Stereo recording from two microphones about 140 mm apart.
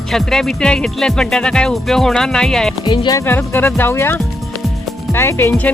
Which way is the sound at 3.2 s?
15° left (ahead or behind).